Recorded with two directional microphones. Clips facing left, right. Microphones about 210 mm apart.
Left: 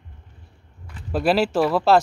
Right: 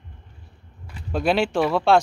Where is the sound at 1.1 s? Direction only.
5° left (ahead or behind).